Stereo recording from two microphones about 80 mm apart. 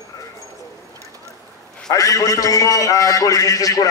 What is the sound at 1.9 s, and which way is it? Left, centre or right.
A man's voice, left.